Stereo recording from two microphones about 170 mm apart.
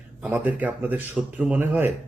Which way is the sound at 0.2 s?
10° right (ahead or behind).